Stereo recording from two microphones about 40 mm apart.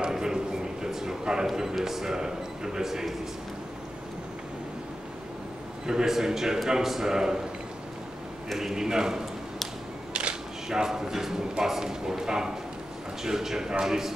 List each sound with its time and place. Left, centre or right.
0.1 s a sound: centre
1.5 s speech: centre
5.9 s speech: centre
8.5 s speech: centre
10.1 s camera: right
10.7 s speech: centre